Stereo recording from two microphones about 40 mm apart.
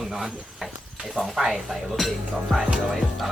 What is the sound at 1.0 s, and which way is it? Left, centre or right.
Speech, centre.